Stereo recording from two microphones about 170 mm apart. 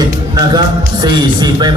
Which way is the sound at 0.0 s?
25° right (ahead or behind).